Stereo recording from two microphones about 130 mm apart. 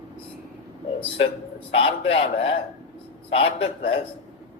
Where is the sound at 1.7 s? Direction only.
45° left (ahead or behind).